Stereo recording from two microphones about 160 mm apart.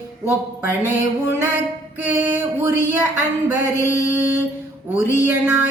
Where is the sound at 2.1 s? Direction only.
10° right (ahead or behind).